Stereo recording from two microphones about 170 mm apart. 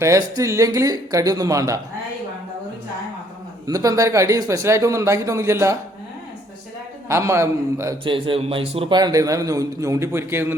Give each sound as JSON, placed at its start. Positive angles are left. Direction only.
{"t": 0.0, "sound": "a man's voice", "side_deg": -20}
{"t": 3.7, "sound": "speech", "side_deg": -20}
{"t": 7.1, "sound": "speech", "side_deg": -15}
{"t": 8.0, "sound": "a man's voice", "side_deg": -30}